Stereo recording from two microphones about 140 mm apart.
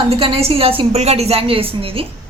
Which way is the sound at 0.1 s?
45° right (ahead or behind).